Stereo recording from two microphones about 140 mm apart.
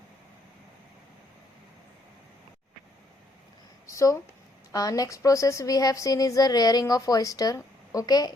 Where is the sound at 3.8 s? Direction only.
20° left (ahead or behind).